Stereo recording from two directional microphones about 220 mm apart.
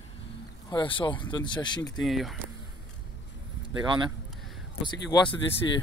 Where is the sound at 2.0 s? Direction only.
Centre (ahead or behind).